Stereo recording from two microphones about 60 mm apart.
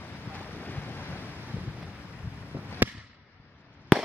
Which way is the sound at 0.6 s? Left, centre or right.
Left.